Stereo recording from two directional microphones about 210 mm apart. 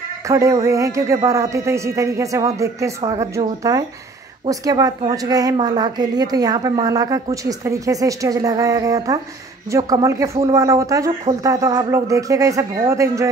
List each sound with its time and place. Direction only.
0.3 s a woman's voice: 15° right (ahead or behind)
10.3 s speech: 25° right (ahead or behind)
10.6 s a woman's voice: 15° right (ahead or behind)